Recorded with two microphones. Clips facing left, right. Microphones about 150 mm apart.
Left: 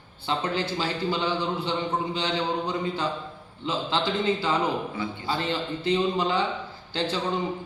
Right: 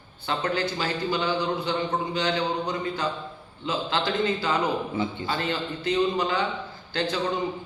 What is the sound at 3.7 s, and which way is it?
Speech, 25° left (ahead or behind).